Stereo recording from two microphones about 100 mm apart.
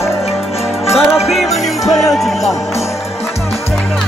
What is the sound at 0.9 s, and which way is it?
Music, 5° right (ahead or behind).